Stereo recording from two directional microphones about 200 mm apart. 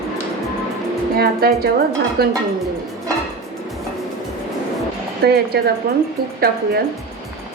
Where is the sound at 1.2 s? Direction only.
50° right (ahead or behind).